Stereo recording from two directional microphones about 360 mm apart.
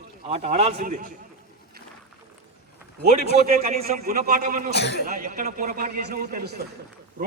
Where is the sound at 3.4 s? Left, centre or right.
Right.